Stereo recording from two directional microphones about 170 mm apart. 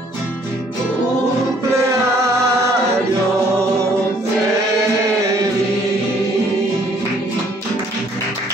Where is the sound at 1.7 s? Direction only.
15° right (ahead or behind).